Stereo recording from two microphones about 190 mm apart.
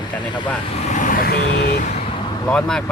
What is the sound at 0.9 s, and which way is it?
Vehicle, 40° left (ahead or behind).